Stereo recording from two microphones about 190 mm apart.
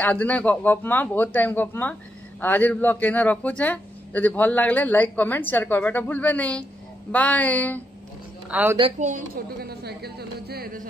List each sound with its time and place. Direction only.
0.0 s a man's voice: 10° left (ahead or behind)
8.5 s a woman's voice: 10° right (ahead or behind)
9.0 s a woman's voice: 45° right (ahead or behind)